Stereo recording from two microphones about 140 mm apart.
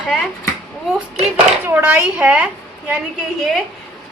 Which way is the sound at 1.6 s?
10° right (ahead or behind).